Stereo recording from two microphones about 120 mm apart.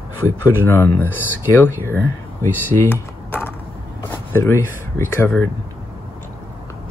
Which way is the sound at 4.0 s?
20° left (ahead or behind).